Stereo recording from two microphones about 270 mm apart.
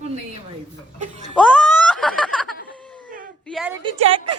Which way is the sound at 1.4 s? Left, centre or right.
Centre.